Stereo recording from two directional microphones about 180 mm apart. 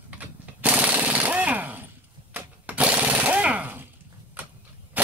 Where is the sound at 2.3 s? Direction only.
10° right (ahead or behind).